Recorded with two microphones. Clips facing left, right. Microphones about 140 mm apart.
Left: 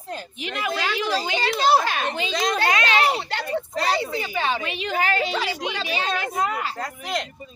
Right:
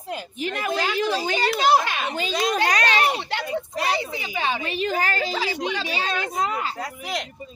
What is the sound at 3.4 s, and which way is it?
A woman's voice, 10° right (ahead or behind).